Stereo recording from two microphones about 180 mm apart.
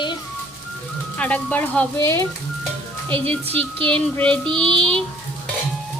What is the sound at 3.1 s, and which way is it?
Speech, 30° right (ahead or behind).